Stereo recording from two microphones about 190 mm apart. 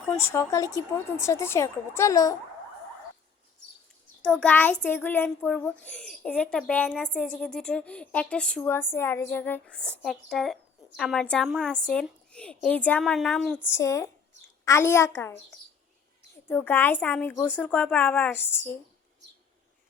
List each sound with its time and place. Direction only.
0.2 s a child's voice: 15° left (ahead or behind)
4.2 s a child's voice: 5° left (ahead or behind)